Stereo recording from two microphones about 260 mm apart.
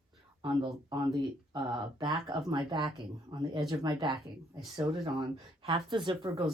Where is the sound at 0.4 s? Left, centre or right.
Centre.